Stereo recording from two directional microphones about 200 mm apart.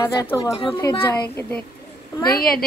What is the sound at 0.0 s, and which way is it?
Speech, 15° left (ahead or behind).